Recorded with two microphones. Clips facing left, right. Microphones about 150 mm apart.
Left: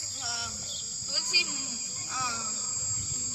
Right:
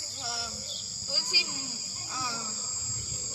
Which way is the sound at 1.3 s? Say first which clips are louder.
Even; 15° left (ahead or behind).